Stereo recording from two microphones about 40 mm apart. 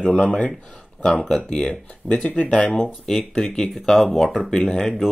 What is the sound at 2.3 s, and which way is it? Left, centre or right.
Speech, left.